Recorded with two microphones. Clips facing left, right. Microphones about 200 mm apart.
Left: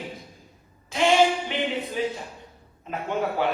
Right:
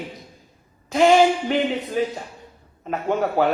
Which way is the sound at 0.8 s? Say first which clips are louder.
Right 5 dB; 40° right (ahead or behind).